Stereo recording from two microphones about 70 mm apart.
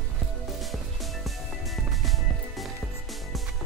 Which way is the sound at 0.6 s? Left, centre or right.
Centre.